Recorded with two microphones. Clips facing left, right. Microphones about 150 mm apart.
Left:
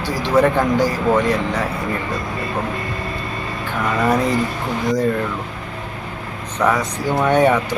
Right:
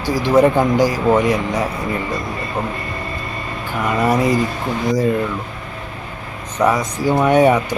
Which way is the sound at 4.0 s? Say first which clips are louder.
Right 2 dB; 10° right (ahead or behind).